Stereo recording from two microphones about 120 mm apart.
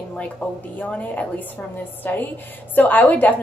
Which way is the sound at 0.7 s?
10° left (ahead or behind).